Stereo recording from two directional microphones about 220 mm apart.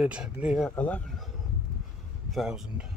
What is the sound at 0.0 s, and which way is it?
Speech, 5° right (ahead or behind).